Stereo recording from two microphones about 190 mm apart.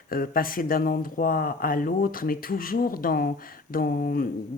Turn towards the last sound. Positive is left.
turn(degrees=50)  # may be behind; listen again after turning